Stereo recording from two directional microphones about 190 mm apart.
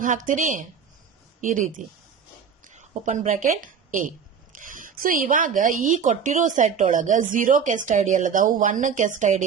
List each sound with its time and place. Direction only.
0.0 s speech: 45° right (ahead or behind)
2.6 s a woman's voice: 40° right (ahead or behind)